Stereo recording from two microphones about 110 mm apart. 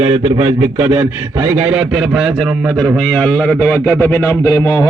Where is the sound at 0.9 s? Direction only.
15° right (ahead or behind).